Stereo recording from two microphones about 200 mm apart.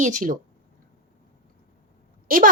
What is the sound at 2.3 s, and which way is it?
Speech, 45° right (ahead or behind).